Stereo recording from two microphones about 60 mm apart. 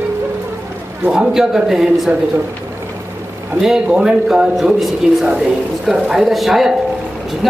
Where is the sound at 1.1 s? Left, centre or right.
Centre.